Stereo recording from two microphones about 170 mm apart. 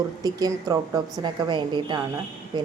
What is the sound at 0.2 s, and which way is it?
A woman's voice, 20° right (ahead or behind).